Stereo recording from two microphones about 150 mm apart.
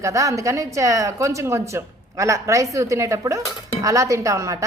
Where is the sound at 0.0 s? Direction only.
20° right (ahead or behind).